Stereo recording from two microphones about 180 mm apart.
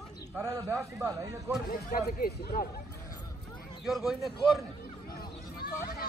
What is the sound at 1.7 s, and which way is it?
Speech, 50° left (ahead or behind).